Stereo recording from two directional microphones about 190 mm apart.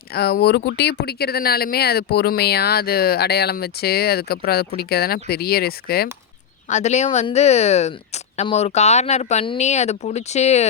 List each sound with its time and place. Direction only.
0.1 s speech: 55° left (ahead or behind)
6.7 s speech: 35° left (ahead or behind)